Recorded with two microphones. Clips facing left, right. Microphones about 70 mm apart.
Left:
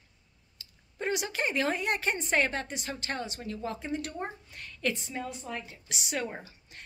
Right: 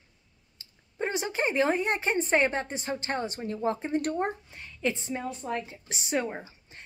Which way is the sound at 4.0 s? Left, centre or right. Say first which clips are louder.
Right 8 dB; right.